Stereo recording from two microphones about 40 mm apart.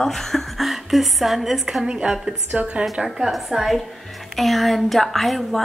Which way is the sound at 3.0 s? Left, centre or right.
Centre.